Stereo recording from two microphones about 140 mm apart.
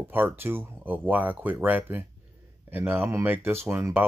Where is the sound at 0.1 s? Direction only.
15° right (ahead or behind).